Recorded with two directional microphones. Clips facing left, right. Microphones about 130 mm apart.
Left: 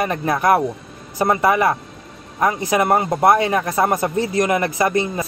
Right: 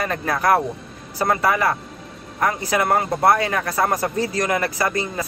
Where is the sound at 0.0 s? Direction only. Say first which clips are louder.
Left 3 dB; 20° left (ahead or behind).